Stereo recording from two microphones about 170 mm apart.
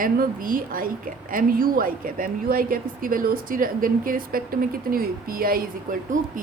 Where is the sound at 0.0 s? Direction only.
55° right (ahead or behind).